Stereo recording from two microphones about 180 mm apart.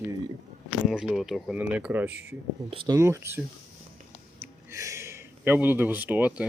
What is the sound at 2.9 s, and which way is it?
Speech, 15° right (ahead or behind).